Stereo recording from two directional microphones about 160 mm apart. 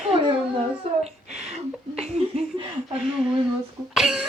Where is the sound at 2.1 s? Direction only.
35° right (ahead or behind).